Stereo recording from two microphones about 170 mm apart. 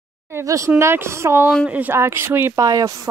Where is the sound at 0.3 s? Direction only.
15° right (ahead or behind).